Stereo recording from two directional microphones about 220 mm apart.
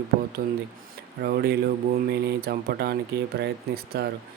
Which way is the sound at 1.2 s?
45° right (ahead or behind).